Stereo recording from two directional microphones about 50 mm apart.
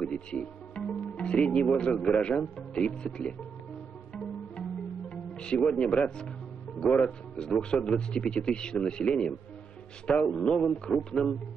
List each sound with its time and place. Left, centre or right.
0.0 s speech: centre
4.1 s music: centre
5.9 s a man's voice: centre